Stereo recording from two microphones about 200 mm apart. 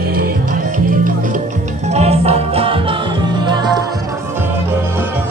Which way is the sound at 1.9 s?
30° right (ahead or behind).